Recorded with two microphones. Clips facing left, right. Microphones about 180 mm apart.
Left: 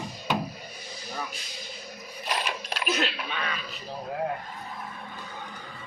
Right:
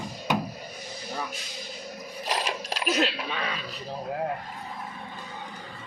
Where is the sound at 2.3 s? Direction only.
35° right (ahead or behind).